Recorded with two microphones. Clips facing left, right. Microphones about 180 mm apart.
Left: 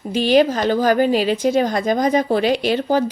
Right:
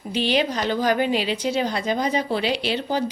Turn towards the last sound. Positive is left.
turn(degrees=45)  # may be behind; listen again after turning